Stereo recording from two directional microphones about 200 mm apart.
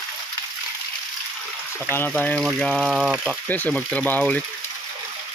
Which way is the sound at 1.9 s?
10° left (ahead or behind).